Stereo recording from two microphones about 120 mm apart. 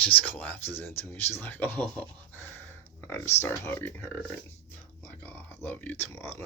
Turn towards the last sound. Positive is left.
turn(degrees=20)  # may be behind; listen again after turning